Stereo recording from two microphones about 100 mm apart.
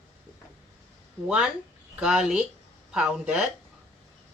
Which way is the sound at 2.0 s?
5° right (ahead or behind).